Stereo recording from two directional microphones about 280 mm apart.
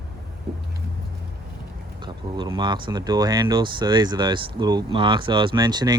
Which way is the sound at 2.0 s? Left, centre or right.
Centre.